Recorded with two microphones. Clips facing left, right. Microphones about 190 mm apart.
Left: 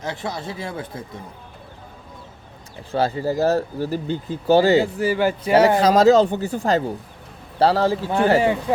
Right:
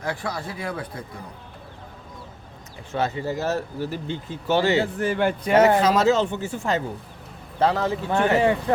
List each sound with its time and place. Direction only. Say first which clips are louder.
0.0 s speech: left 1 dB; 20° left (ahead or behind)
2.9 s speech: left 4 dB; 35° left (ahead or behind)
4.8 s speech: left 3 dB; 5° left (ahead or behind)
5.5 s speech: left 2 dB; 35° left (ahead or behind)
8.4 s speech: left 1 dB; 10° left (ahead or behind)